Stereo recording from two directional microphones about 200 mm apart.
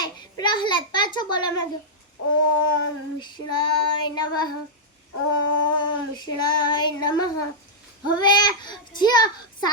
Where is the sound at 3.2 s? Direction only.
20° left (ahead or behind).